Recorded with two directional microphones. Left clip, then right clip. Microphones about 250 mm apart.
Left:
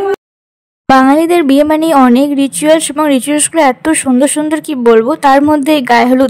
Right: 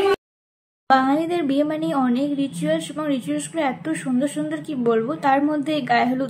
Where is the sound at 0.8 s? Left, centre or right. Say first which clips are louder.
Left 11 dB; left.